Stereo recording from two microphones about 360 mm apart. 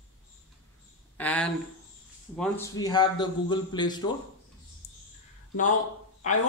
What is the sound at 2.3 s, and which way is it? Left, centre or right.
A man's voice, centre.